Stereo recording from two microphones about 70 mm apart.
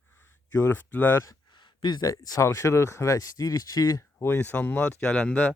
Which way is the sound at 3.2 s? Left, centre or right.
Left.